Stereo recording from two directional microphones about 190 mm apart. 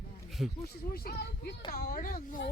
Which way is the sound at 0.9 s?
55° left (ahead or behind).